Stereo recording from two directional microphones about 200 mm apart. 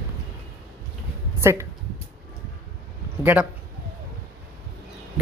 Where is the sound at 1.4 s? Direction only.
10° right (ahead or behind).